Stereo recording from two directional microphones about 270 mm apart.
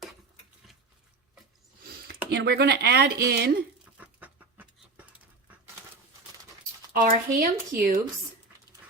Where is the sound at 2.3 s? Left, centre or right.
Right.